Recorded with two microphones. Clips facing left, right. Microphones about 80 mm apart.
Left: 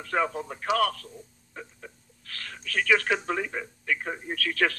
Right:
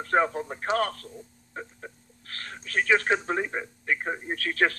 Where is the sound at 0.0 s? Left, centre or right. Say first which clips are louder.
Right 3 dB; right.